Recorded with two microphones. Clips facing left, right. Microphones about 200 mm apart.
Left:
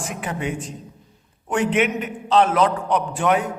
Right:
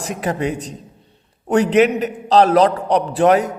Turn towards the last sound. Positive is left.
turn(degrees=-35)  # may be behind; listen again after turning